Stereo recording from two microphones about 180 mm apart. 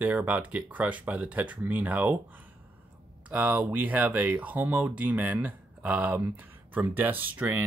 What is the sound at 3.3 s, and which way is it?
Speech, 10° right (ahead or behind).